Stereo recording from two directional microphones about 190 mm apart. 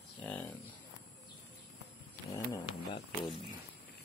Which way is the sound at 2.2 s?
15° left (ahead or behind).